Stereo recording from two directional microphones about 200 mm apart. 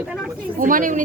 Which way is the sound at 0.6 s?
40° right (ahead or behind).